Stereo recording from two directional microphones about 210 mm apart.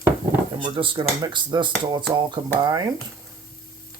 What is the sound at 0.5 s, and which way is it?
Speech, 25° right (ahead or behind).